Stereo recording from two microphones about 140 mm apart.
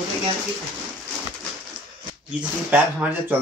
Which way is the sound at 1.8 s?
35° right (ahead or behind).